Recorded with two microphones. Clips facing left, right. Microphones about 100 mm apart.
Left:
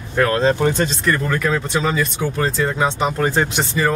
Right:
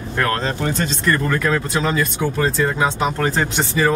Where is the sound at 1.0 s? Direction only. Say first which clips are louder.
Even; centre (ahead or behind).